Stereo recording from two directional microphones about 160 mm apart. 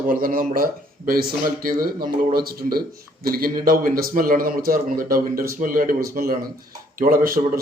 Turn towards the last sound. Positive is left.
turn(degrees=-65)  # may be behind; listen again after turning